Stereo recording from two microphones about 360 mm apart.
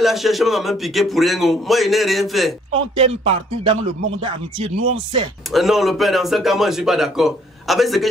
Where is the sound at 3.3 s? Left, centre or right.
Centre.